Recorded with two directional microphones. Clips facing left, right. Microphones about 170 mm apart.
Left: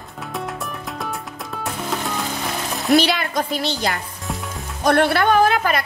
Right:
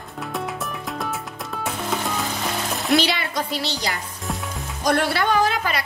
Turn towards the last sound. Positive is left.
turn(degrees=55)  # may be behind; listen again after turning